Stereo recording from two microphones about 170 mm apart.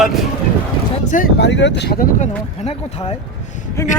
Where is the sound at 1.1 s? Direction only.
50° left (ahead or behind).